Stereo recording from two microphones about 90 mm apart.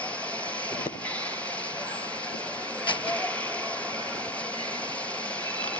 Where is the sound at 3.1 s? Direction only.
15° left (ahead or behind).